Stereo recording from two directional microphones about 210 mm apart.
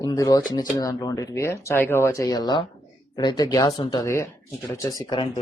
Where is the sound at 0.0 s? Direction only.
20° left (ahead or behind).